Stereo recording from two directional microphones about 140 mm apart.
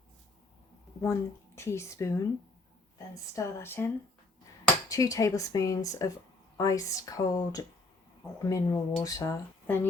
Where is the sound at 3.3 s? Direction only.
15° left (ahead or behind).